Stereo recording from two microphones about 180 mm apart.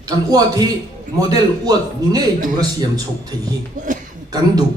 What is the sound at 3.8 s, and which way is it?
Speech, 45° right (ahead or behind).